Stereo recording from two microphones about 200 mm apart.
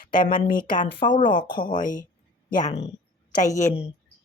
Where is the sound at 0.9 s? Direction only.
25° left (ahead or behind).